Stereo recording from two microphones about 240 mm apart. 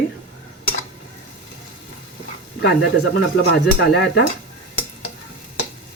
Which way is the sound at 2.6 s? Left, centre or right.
Left.